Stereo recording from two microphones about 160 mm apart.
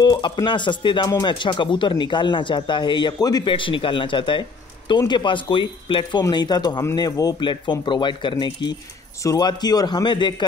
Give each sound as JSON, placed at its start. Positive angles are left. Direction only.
{"t": 0.0, "sound": "speech", "side_deg": 25}